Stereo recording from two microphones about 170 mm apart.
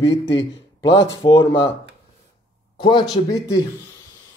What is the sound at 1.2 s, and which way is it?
Speech, 30° left (ahead or behind).